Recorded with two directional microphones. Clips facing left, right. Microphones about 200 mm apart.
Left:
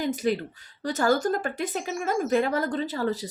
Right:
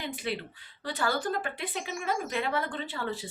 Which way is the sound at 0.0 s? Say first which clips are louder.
Left 9 dB; 40° left (ahead or behind).